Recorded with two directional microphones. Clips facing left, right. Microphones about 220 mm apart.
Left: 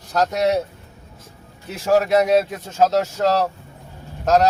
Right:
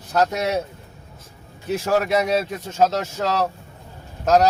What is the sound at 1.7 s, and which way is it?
A man's voice, centre (ahead or behind).